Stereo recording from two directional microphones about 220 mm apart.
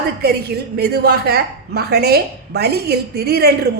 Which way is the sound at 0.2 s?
45° right (ahead or behind).